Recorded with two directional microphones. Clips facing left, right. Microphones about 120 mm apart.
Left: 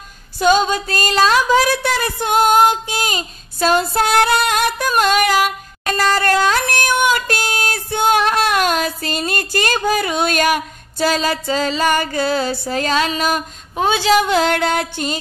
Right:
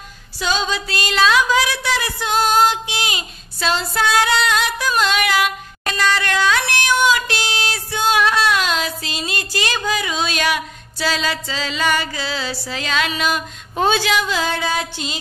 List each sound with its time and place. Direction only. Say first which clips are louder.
0.4 s a sound: left 7 dB; 50° left (ahead or behind)
13.7 s speech: even; 15° left (ahead or behind)
14.2 s music: left 5 dB; 65° left (ahead or behind)